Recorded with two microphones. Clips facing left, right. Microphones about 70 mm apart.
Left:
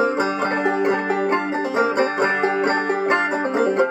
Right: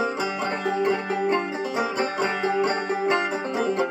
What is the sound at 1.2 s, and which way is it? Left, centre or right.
Music, left.